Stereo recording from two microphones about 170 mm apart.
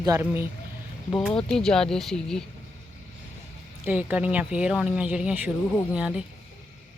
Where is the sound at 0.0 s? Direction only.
20° right (ahead or behind).